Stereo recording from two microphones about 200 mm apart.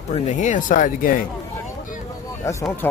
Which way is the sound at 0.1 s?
35° left (ahead or behind).